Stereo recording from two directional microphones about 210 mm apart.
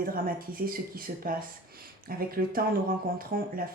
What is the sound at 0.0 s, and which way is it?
Speech, 40° right (ahead or behind).